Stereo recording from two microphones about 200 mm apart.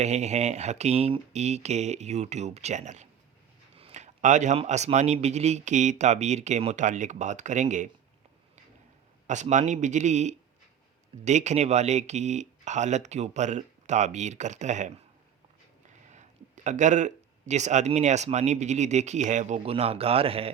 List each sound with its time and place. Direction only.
0.0 s speech: 35° right (ahead or behind)
9.2 s speech: 35° right (ahead or behind)
16.6 s speech: 40° right (ahead or behind)